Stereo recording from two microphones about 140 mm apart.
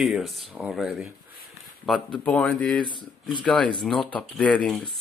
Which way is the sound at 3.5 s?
5° left (ahead or behind).